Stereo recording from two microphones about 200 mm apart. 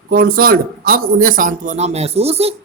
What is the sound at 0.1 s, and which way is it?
Speech, 45° right (ahead or behind).